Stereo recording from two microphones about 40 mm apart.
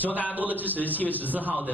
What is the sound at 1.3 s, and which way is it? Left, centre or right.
Cough, right.